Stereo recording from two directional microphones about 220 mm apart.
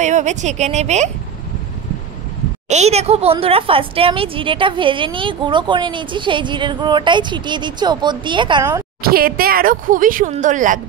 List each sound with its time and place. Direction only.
0.0 s speech: 30° right (ahead or behind)
2.7 s speech: 30° right (ahead or behind)
9.1 s speech: 45° right (ahead or behind)